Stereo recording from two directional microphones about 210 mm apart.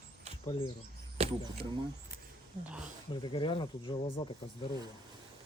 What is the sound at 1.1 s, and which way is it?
Speech, 25° right (ahead or behind).